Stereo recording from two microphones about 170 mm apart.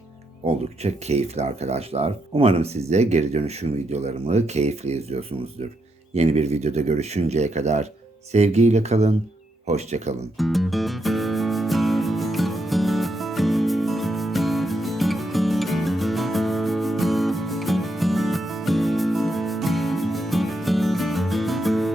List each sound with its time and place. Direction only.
0.4 s speech: 40° right (ahead or behind)
6.1 s speech: 40° right (ahead or behind)
10.3 s music: centre (ahead or behind)